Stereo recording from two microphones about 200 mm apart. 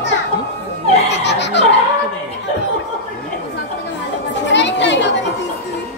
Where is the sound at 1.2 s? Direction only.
60° left (ahead or behind).